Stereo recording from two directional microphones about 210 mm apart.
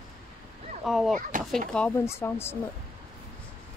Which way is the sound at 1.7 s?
10° left (ahead or behind).